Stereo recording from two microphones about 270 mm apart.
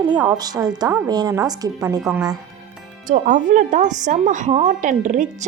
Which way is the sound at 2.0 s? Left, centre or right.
Centre.